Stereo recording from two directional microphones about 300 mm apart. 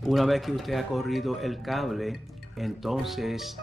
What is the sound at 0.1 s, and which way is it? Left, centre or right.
Speech, centre.